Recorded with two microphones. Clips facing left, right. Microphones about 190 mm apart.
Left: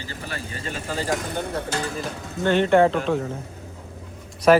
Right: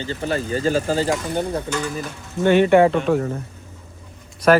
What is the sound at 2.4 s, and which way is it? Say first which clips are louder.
Speech: right 4 dB; 10° right (ahead or behind).